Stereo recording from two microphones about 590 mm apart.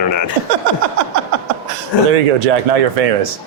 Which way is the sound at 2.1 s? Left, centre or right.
Right.